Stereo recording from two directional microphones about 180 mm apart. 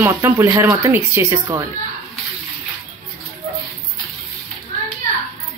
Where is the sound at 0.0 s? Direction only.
15° right (ahead or behind).